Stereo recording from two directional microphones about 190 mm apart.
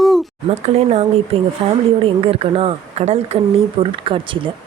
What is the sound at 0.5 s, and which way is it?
A woman's voice, 35° right (ahead or behind).